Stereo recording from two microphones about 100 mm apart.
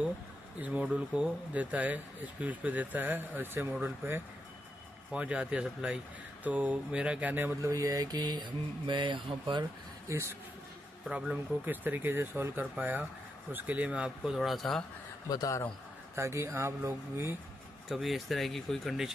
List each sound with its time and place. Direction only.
0.7 s speech: 5° right (ahead or behind)
7.6 s speech: 35° right (ahead or behind); by 9.7 s 55° right (ahead or behind)
10.0 s a man's voice: 30° right (ahead or behind)
11.1 s speech: 10° right (ahead or behind)
15.2 s a man's voice: 35° left (ahead or behind)
16.2 s speech: 30° right (ahead or behind)
17.8 s speech: centre (ahead or behind)